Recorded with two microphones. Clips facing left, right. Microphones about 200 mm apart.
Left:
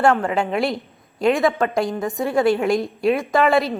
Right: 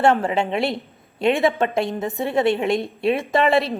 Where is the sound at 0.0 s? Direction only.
30° right (ahead or behind).